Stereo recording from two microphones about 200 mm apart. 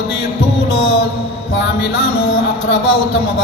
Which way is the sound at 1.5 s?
60° left (ahead or behind).